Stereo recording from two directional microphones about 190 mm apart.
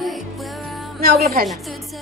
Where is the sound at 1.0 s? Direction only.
55° right (ahead or behind).